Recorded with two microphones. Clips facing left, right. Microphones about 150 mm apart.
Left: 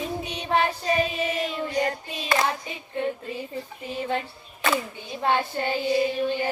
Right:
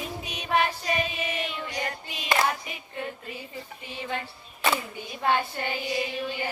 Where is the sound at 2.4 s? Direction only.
30° left (ahead or behind).